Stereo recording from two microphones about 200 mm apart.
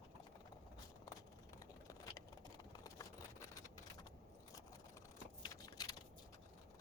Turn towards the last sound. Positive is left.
turn(degrees=20)  # may be behind; listen again after turning